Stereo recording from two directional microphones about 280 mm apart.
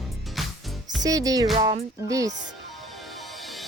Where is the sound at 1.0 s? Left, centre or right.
Centre.